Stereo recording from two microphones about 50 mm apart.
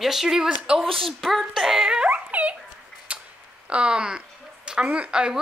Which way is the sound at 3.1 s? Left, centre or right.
Right.